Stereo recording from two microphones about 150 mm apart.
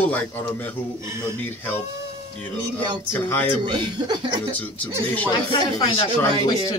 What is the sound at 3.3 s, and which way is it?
Speech, 15° left (ahead or behind).